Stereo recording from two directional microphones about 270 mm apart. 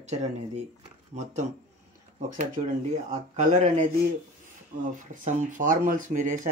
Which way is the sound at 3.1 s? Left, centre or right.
Right.